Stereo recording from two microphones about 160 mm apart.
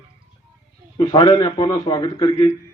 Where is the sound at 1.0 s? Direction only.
25° left (ahead or behind).